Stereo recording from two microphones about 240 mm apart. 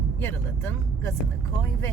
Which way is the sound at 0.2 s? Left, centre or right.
Centre.